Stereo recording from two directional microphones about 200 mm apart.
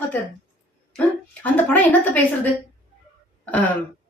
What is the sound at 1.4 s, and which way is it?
Speech, 10° left (ahead or behind).